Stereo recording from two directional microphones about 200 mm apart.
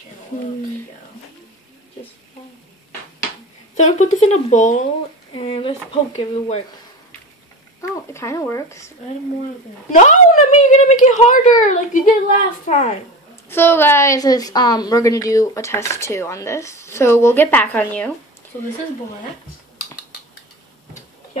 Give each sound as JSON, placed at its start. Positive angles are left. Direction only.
{"t": 3.7, "sound": "a woman's voice", "side_deg": 35}
{"t": 7.9, "sound": "speech", "side_deg": 15}
{"t": 9.9, "sound": "a woman's voice", "side_deg": 40}
{"t": 13.5, "sound": "a woman's voice", "side_deg": 10}